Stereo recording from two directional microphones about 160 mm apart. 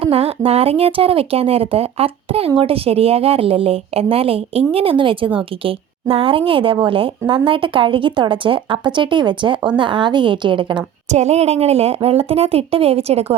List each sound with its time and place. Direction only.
0.0 s a woman's voice: 35° right (ahead or behind)
11.1 s a woman's voice: 45° right (ahead or behind)